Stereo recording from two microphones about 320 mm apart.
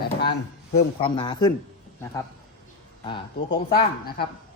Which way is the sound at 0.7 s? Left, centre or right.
Centre.